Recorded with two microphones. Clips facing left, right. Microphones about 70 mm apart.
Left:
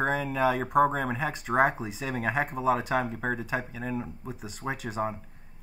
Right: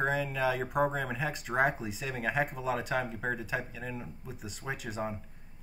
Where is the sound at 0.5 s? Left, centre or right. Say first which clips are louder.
Left 7 dB; left.